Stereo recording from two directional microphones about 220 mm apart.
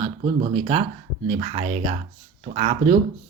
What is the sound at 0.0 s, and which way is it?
Speech, 25° right (ahead or behind).